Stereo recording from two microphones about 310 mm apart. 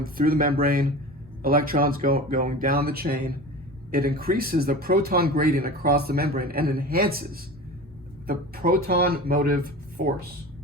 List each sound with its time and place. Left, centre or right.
0.0 s speech: right
8.3 s speech: right